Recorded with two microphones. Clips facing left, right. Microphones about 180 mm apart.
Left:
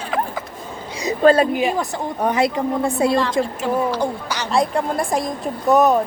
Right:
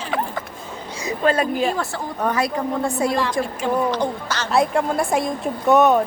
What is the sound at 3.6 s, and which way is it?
Speech, 5° left (ahead or behind).